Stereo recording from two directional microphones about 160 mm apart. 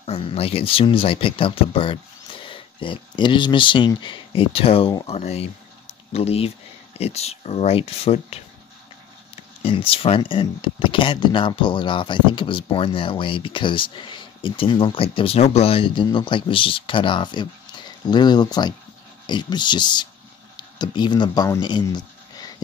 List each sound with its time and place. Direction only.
0.0 s speech: 40° left (ahead or behind)